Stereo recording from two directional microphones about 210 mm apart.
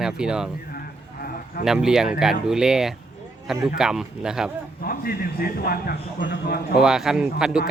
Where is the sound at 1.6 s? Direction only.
Centre (ahead or behind).